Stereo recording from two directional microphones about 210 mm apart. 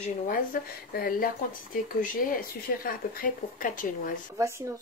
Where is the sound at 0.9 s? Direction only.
45° left (ahead or behind).